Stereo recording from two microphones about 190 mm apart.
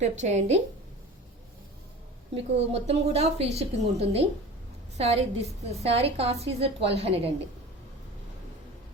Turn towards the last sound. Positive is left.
turn(degrees=-30)  # may be behind; listen again after turning